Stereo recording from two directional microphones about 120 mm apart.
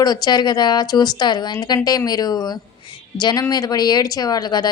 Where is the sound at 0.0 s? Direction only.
35° left (ahead or behind).